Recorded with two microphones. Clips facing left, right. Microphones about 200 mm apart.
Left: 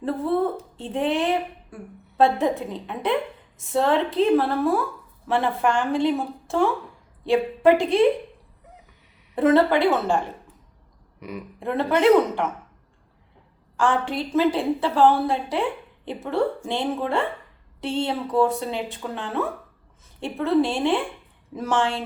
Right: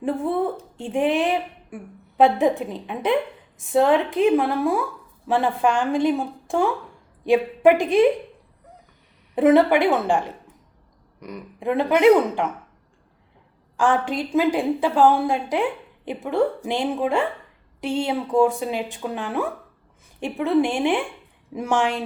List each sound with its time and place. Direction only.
0.0 s a woman's voice: 15° right (ahead or behind)
9.3 s a woman's voice: 15° right (ahead or behind)
11.6 s a woman's voice: 15° right (ahead or behind)
13.7 s a woman's voice: 15° right (ahead or behind)